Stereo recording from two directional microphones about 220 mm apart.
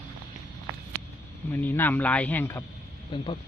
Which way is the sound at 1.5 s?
10° left (ahead or behind).